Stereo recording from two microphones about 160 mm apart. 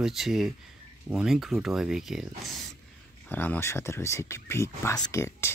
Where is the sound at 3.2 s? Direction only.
10° left (ahead or behind).